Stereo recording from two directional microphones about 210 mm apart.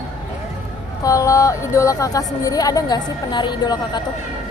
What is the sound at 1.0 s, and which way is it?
Speech, 15° left (ahead or behind).